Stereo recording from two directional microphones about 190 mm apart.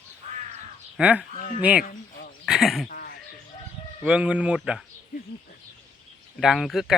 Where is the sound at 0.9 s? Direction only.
5° right (ahead or behind).